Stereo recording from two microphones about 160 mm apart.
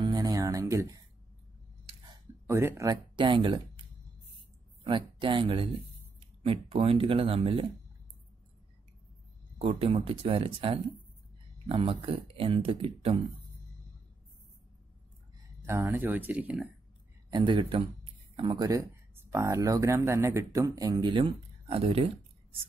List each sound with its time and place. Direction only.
0.0 s music: 25° right (ahead or behind)
2.4 s speech: 15° right (ahead or behind)
4.8 s speech: 30° right (ahead or behind)
9.6 s speech: 35° right (ahead or behind)
15.6 s speech: 15° right (ahead or behind)
17.3 s speech: 30° right (ahead or behind)
18.3 s a sound: 35° right (ahead or behind)
18.6 s speech: 20° right (ahead or behind); by 22.6 s 40° right (ahead or behind)